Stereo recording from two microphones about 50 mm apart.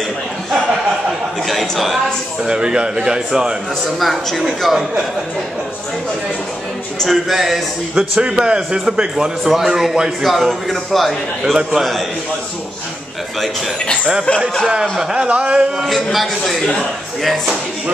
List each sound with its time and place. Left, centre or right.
1.5 s a man's voice: centre
2.4 s speech: centre
4.0 s a man's voice: centre
7.0 s a man's voice: centre
8.2 s speech: centre
9.1 s a man's voice: centre
14.8 s speech: centre
15.2 s speech: right
15.8 s a man's voice: centre